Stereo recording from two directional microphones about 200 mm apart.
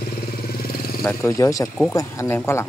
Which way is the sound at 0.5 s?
50° left (ahead or behind).